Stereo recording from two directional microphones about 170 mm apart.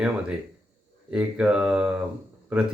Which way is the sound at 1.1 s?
5° right (ahead or behind).